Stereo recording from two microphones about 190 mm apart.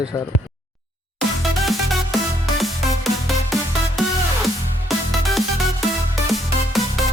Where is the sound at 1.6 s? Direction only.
Centre (ahead or behind).